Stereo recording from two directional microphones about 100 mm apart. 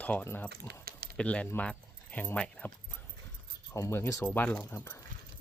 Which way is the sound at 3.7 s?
25° left (ahead or behind).